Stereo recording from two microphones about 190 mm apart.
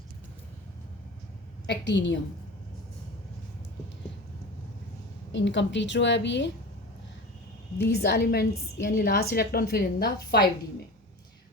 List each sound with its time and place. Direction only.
1.6 s a woman's voice: 70° left (ahead or behind)
5.3 s a woman's voice: 70° left (ahead or behind)
7.8 s a woman's voice: 55° left (ahead or behind)